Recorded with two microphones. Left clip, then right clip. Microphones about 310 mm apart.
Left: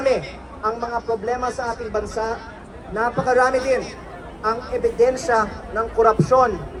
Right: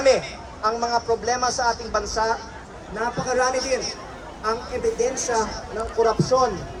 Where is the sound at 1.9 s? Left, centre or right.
Centre.